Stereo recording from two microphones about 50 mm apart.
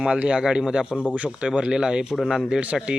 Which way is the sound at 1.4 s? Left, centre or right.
Centre.